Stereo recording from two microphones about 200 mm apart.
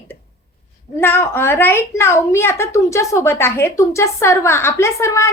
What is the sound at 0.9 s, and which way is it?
A woman's voice, 10° left (ahead or behind).